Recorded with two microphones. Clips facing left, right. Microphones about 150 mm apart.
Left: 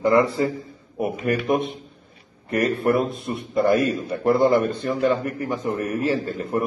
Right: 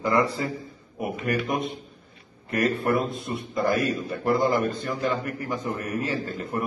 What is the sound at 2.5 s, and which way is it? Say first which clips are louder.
A man's voice: left 3 dB; 25° left (ahead or behind).